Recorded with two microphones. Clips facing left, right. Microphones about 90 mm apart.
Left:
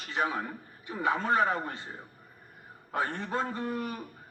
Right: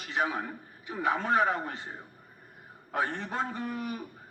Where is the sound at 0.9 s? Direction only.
35° left (ahead or behind).